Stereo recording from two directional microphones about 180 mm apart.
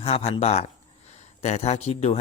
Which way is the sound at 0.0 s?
35° left (ahead or behind).